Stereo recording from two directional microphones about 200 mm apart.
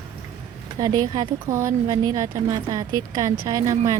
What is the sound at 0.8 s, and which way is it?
A woman's voice, 15° right (ahead or behind).